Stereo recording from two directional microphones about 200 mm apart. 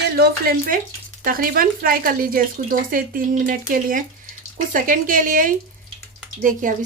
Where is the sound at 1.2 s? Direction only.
45° right (ahead or behind).